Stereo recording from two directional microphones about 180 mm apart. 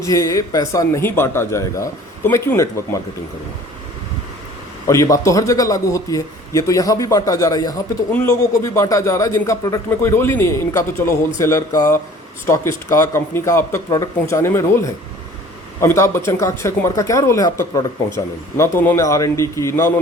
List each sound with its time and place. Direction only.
0.0 s a man's voice: 20° left (ahead or behind)
4.9 s a man's voice: 15° left (ahead or behind)